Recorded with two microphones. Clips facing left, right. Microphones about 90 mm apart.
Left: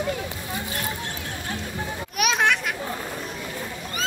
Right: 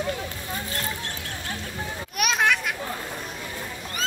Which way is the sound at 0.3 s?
15° left (ahead or behind).